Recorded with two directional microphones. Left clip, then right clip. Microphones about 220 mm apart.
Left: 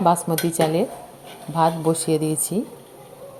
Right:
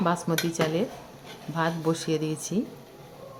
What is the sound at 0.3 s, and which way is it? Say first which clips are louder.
Speech: left 6 dB; 10° left (ahead or behind).